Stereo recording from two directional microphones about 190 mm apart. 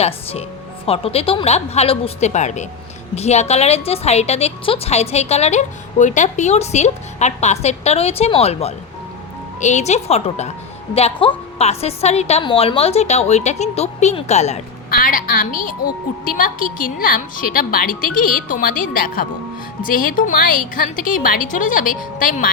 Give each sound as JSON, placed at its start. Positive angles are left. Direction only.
{"t": 0.0, "sound": "a woman's voice", "side_deg": 35}
{"t": 14.8, "sound": "a woman's voice", "side_deg": 50}